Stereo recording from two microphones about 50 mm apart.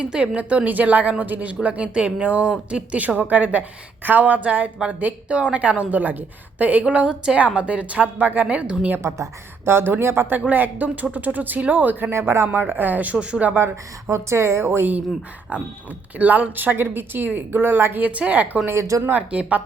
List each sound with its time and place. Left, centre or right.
0.0 s a woman's voice: right
9.0 s a woman's voice: right
9.6 s a woman's voice: right
10.2 s speech: right
12.2 s speech: right
12.5 s speech: right
14.1 s a woman's voice: right
14.6 s a woman's voice: right
15.5 s speech: right
16.8 s a woman's voice: right
18.0 s speech: right
18.7 s a woman's voice: right
19.1 s speech: right